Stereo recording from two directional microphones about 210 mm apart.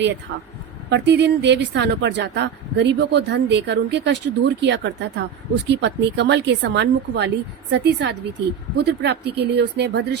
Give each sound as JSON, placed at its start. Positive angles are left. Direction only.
{"t": 0.9, "sound": "speech", "side_deg": -55}